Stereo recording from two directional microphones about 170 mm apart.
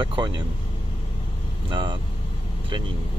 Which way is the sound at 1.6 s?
25° right (ahead or behind).